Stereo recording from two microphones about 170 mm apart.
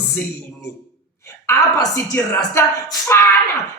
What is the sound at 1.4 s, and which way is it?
A woman's voice, 15° left (ahead or behind).